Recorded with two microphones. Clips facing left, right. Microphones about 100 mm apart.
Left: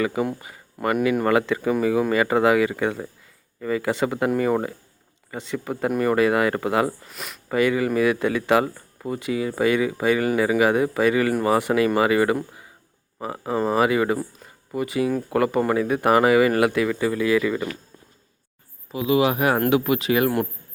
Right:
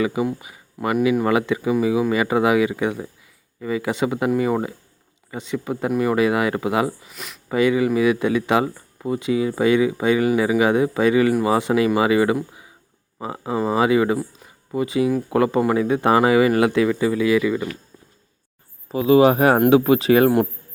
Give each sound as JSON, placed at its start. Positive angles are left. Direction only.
{"t": 0.0, "sound": "speech", "side_deg": -20}
{"t": 7.0, "sound": "speech", "side_deg": 0}
{"t": 7.5, "sound": "speech", "side_deg": -20}
{"t": 18.9, "sound": "speech", "side_deg": -35}